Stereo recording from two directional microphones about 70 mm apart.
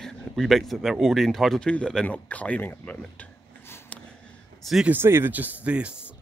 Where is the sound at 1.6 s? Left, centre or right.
Centre.